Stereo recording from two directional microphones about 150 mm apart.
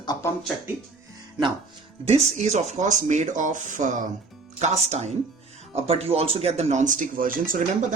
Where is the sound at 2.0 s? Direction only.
45° right (ahead or behind).